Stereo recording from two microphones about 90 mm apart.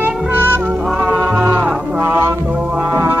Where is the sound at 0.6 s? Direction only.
15° right (ahead or behind).